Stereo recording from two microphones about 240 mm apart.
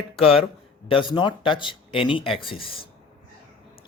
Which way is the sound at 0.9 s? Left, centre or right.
Left.